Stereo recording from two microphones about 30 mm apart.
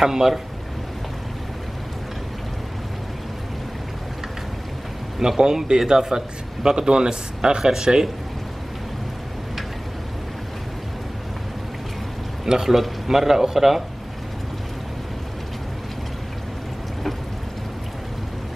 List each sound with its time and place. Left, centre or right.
0.0 s speech: centre
5.4 s speech: right
12.4 s a man's voice: centre
12.7 s speech: centre